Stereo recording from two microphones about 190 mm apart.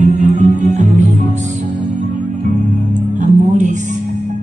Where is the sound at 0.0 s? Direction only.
40° right (ahead or behind).